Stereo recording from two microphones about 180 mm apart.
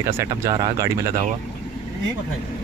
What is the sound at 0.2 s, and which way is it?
Speech, 20° right (ahead or behind).